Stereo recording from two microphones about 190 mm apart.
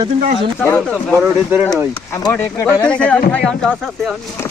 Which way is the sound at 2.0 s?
15° left (ahead or behind).